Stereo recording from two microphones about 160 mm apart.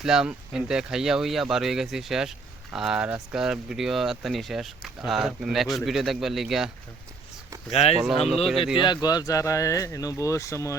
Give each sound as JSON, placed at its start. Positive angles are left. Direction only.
{"t": 0.0, "sound": "speech", "side_deg": -5}
{"t": 7.7, "sound": "speech", "side_deg": 40}
{"t": 8.8, "sound": "speech", "side_deg": 25}